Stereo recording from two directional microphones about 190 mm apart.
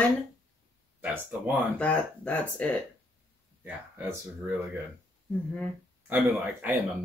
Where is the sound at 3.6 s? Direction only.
10° right (ahead or behind).